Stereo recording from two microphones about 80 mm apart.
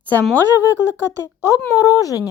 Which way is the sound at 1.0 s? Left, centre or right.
Left.